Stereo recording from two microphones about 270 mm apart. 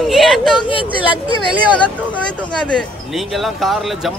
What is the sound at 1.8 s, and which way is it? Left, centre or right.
Speech, centre.